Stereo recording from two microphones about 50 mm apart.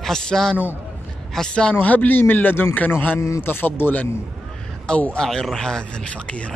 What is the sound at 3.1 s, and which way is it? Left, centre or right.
Speech, left.